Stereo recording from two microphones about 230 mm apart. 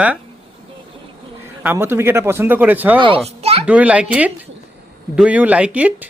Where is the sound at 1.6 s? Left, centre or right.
Centre.